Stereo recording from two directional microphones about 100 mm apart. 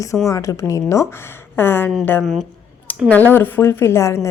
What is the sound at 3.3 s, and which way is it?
Speech, 20° left (ahead or behind).